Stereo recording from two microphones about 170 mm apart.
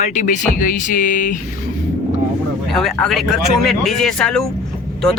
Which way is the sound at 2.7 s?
Centre (ahead or behind).